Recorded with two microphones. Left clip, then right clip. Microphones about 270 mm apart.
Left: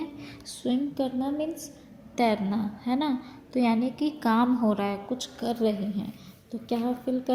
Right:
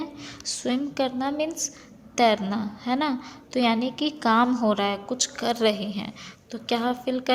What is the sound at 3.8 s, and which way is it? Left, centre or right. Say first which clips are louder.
Speech: right 2 dB; right.